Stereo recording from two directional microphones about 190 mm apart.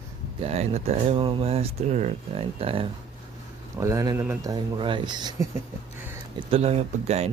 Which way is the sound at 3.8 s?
15° right (ahead or behind).